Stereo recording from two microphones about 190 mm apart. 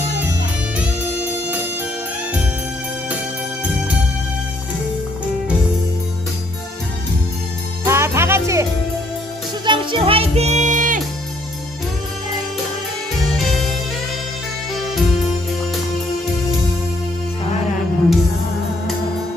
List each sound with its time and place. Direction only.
7.9 s music: 15° right (ahead or behind)
9.6 s music: 25° right (ahead or behind); by 11.0 s 45° right (ahead or behind)
13.3 s music: centre (ahead or behind)
14.8 s music: centre (ahead or behind)